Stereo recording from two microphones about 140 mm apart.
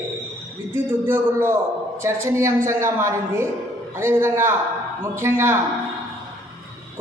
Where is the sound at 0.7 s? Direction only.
15° right (ahead or behind).